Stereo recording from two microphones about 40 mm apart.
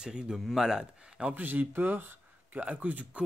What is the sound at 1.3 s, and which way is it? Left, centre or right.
Speech, right.